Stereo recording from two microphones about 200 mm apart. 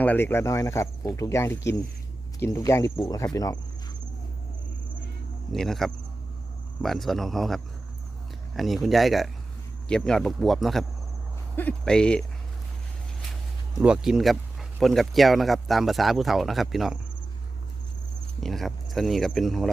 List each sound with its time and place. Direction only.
0.0 s speech: 10° left (ahead or behind)
5.5 s speech: centre (ahead or behind)
13.7 s speech: 5° right (ahead or behind)
18.3 s speech: centre (ahead or behind)